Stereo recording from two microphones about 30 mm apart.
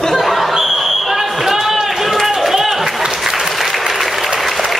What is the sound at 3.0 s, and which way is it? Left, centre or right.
Applause, centre.